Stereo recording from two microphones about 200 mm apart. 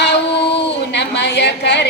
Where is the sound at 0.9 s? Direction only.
60° left (ahead or behind).